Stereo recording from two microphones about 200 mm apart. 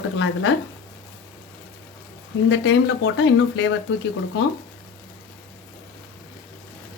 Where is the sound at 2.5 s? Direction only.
65° left (ahead or behind).